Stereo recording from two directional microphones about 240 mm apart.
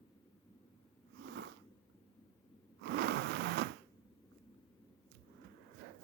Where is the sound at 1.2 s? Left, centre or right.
Right.